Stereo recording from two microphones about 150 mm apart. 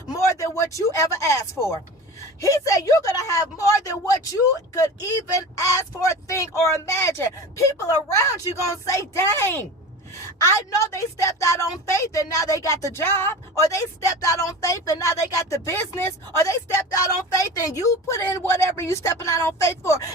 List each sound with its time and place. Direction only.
0.1 s speech: 20° left (ahead or behind)
10.9 s speech: 20° left (ahead or behind)